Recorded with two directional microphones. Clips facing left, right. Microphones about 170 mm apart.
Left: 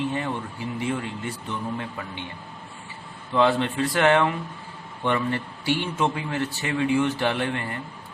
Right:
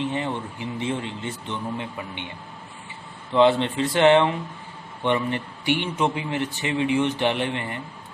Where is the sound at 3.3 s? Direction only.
20° right (ahead or behind).